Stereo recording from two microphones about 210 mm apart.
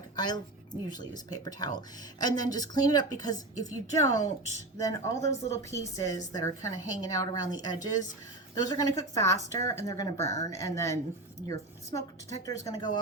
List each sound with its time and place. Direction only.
0.2 s a woman's voice: 20° left (ahead or behind)